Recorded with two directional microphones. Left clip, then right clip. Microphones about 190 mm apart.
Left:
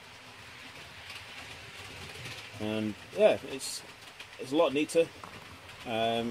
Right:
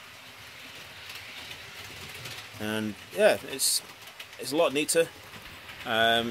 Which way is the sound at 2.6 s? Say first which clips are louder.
Right 2 dB; 10° right (ahead or behind).